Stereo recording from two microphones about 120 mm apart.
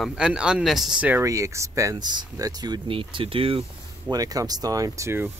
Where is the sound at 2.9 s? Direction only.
45° right (ahead or behind).